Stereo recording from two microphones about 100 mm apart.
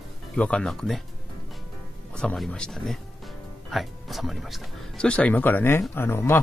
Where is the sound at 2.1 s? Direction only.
5° left (ahead or behind).